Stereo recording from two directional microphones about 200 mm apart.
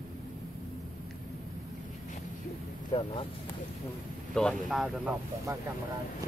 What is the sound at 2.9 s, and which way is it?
Speech, 30° left (ahead or behind).